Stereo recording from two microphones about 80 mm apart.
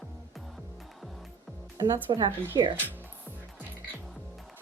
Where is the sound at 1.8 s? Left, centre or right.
Right.